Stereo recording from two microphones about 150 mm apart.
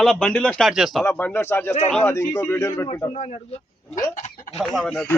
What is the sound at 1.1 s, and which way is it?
Speech, 15° left (ahead or behind).